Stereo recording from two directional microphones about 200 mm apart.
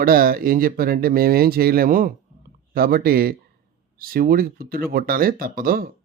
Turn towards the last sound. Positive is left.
turn(degrees=-45)  # may be behind; listen again after turning